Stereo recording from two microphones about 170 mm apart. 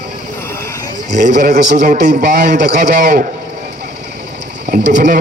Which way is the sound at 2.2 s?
70° right (ahead or behind).